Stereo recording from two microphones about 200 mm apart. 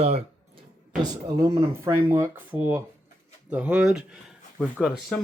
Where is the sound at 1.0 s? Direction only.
15° right (ahead or behind).